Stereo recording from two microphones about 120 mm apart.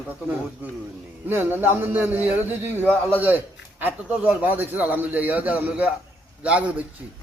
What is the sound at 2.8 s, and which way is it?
Speech, 10° left (ahead or behind).